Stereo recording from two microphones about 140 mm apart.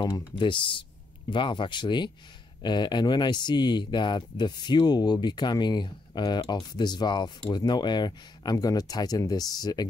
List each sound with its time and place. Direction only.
0.0 s speech: 35° left (ahead or behind)